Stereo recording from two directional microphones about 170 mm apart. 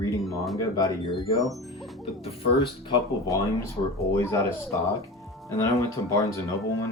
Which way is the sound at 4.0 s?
15° left (ahead or behind).